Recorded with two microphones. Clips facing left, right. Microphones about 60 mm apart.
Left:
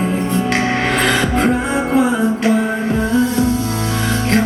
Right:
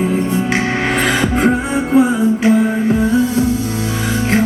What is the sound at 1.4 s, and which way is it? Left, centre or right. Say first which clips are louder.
Music: right 1 dB; centre.